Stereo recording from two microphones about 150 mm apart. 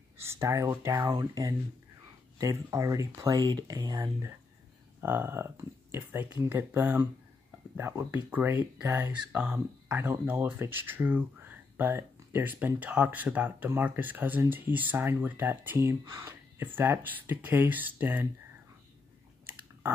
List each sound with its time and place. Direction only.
0.2 s speech: 15° right (ahead or behind)